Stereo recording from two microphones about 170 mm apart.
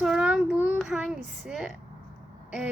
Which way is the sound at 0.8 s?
5° right (ahead or behind).